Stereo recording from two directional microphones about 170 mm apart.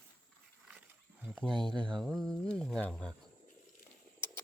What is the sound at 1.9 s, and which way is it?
Speech, 5° left (ahead or behind).